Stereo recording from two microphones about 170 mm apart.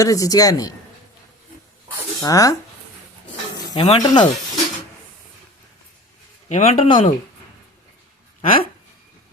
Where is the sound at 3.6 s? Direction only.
25° left (ahead or behind).